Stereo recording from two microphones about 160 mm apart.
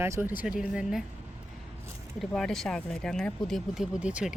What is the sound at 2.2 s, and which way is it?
Speech, centre (ahead or behind).